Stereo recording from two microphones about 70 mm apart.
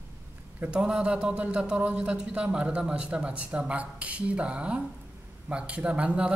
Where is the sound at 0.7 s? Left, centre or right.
Centre.